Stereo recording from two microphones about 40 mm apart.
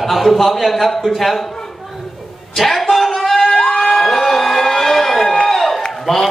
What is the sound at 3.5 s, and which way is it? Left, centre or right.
Crowd, centre.